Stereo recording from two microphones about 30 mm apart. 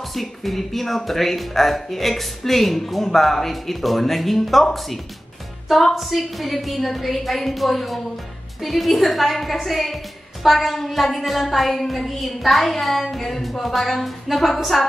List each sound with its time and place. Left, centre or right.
0.1 s speech: centre
5.7 s speech: centre